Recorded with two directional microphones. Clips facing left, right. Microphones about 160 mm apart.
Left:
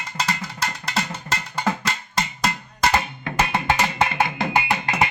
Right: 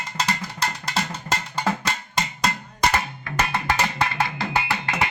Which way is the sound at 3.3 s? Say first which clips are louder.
Left 3 dB; 25° left (ahead or behind).